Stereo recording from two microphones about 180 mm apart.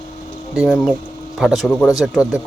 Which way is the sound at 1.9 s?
20° left (ahead or behind).